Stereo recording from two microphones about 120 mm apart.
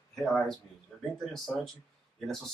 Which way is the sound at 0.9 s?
5° left (ahead or behind).